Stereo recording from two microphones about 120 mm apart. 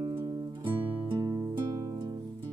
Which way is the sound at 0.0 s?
40° right (ahead or behind).